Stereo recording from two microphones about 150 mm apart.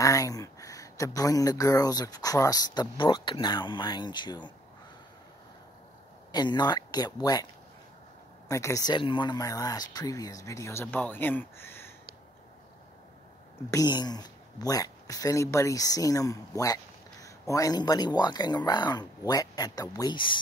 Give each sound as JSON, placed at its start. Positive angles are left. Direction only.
{"t": 0.0, "sound": "speech", "side_deg": 25}
{"t": 6.3, "sound": "speech", "side_deg": 30}
{"t": 8.5, "sound": "speech", "side_deg": 20}
{"t": 13.7, "sound": "speech", "side_deg": 25}